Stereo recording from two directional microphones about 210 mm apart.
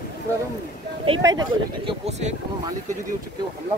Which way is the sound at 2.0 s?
30° right (ahead or behind).